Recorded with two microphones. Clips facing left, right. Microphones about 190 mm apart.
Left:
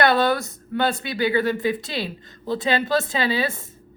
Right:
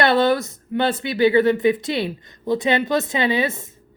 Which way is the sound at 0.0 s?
25° right (ahead or behind).